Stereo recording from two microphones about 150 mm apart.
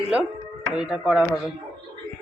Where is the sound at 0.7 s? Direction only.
5° right (ahead or behind).